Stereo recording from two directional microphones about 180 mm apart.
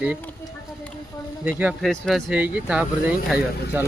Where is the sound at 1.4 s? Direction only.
5° right (ahead or behind).